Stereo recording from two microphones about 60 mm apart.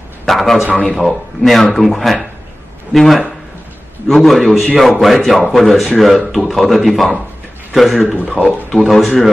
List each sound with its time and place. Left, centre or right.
0.2 s a man's voice: centre